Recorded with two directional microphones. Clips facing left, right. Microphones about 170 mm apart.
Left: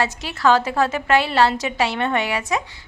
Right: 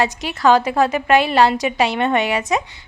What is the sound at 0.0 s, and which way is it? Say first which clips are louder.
A woman's voice: right 3 dB; 15° right (ahead or behind).